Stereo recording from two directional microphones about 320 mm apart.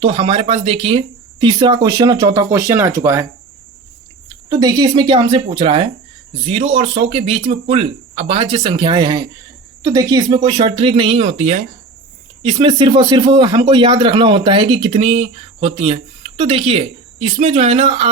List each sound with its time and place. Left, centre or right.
0.0 s speech: centre
4.4 s speech: centre